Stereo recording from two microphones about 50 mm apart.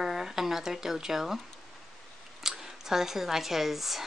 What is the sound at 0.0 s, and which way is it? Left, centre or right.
Speech, centre.